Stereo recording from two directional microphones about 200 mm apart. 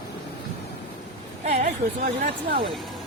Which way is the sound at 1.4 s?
35° right (ahead or behind).